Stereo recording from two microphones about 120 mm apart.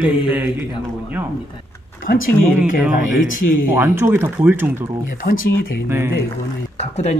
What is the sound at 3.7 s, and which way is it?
Speech, 20° right (ahead or behind).